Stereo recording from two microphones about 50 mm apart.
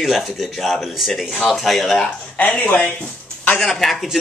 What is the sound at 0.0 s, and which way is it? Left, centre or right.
Speech, centre.